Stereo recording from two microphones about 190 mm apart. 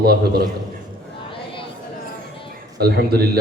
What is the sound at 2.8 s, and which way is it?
Speech, 55° right (ahead or behind).